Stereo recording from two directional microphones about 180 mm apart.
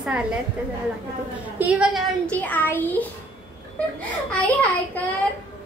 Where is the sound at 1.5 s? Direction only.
10° right (ahead or behind).